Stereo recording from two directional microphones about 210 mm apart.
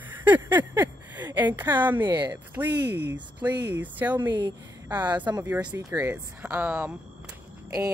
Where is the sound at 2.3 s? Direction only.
10° right (ahead or behind).